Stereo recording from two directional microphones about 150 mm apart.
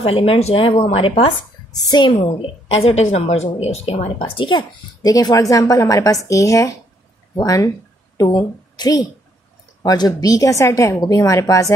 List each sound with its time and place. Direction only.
0.0 s a woman's voice: 35° left (ahead or behind)
2.1 s a woman's voice: 40° left (ahead or behind)
4.2 s a woman's voice: 30° left (ahead or behind)